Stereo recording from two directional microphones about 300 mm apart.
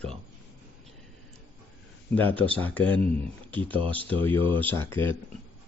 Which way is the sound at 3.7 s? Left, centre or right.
Centre.